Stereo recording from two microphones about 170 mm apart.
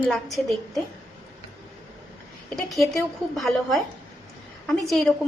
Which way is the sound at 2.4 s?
Centre (ahead or behind).